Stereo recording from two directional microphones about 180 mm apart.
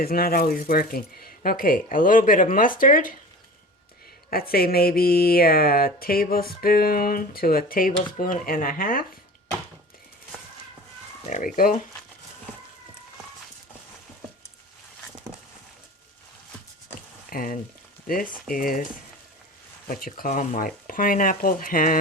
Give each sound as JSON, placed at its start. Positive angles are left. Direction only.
{"t": 0.0, "sound": "speech", "side_deg": 55}
{"t": 4.3, "sound": "speech", "side_deg": 55}
{"t": 11.3, "sound": "speech", "side_deg": 45}
{"t": 17.2, "sound": "frying", "side_deg": 50}
{"t": 18.1, "sound": "speech", "side_deg": 50}
{"t": 19.9, "sound": "speech", "side_deg": 50}